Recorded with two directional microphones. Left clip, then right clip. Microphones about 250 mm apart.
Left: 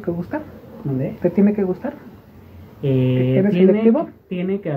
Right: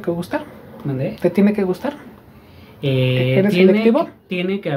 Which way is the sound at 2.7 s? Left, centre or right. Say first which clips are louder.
Right 1 dB; centre.